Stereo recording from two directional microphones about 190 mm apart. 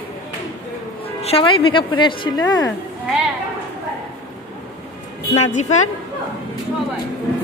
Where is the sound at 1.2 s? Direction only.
30° left (ahead or behind).